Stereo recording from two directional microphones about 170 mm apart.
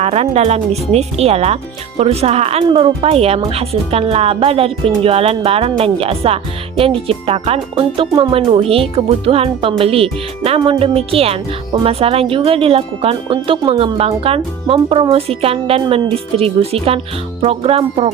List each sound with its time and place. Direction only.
0.0 s speech: 40° right (ahead or behind)